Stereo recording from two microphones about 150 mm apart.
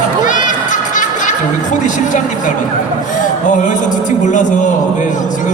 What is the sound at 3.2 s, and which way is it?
A man's voice, 60° left (ahead or behind).